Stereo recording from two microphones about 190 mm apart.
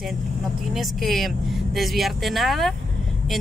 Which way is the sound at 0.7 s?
Centre (ahead or behind).